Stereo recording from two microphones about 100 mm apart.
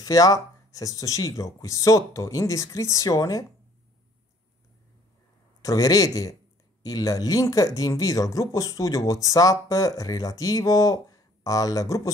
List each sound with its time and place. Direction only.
0.0 s speech: 40° left (ahead or behind)
5.6 s speech: 35° left (ahead or behind)